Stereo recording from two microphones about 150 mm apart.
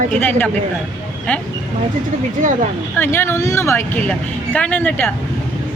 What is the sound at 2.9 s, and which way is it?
A woman's voice, 15° left (ahead or behind).